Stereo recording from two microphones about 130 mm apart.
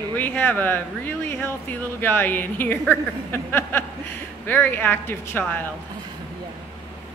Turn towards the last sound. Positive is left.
turn(degrees=15)  # may be behind; listen again after turning